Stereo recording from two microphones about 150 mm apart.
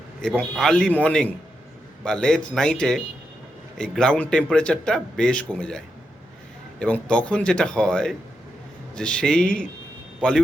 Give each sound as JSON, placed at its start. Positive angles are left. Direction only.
{"t": 0.2, "sound": "speech", "side_deg": 5}